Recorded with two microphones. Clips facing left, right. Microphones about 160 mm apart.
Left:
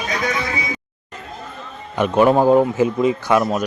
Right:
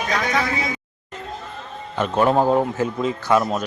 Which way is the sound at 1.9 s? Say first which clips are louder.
Left 4 dB; 10° left (ahead or behind).